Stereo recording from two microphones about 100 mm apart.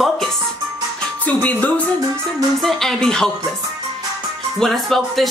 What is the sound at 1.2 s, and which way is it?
Speech, 15° left (ahead or behind).